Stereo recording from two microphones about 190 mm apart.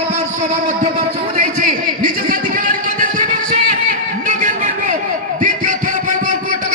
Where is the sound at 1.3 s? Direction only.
45° right (ahead or behind).